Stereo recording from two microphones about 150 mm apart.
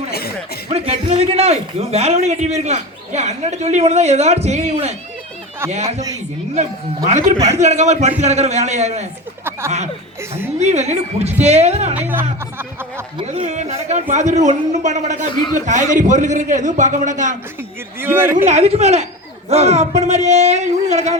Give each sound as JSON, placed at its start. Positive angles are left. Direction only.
{"t": 0.1, "sound": "chuckle", "side_deg": 90}
{"t": 0.7, "sound": "a man's voice", "side_deg": -45}
{"t": 7.6, "sound": "a man's voice", "side_deg": -50}
{"t": 9.4, "sound": "a sound", "side_deg": -15}
{"t": 10.6, "sound": "a man's voice", "side_deg": -45}
{"t": 11.9, "sound": "speech", "side_deg": -10}
{"t": 13.2, "sound": "a man's voice", "side_deg": -45}
{"t": 15.3, "sound": "a man's voice", "side_deg": 30}
{"t": 15.5, "sound": "a man's voice", "side_deg": -55}
{"t": 18.0, "sound": "speech", "side_deg": -15}
{"t": 18.3, "sound": "a man's voice", "side_deg": -50}